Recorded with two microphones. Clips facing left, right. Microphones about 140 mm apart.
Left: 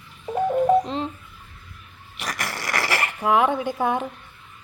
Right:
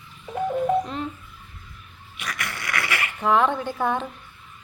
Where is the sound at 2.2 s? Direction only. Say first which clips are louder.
Left 3 dB; 40° left (ahead or behind).